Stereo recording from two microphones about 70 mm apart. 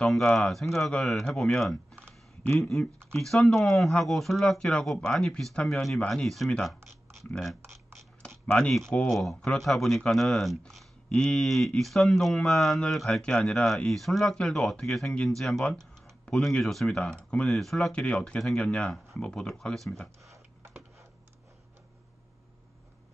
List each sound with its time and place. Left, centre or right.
0.0 s speech: centre
7.6 s typing: right
8.5 s speech: centre
13.2 s speech: centre
15.6 s computer keyboard: centre
16.5 s speech: centre
17.5 s speech: centre